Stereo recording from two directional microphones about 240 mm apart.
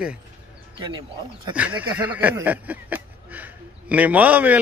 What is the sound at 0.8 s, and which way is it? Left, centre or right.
Speech, centre.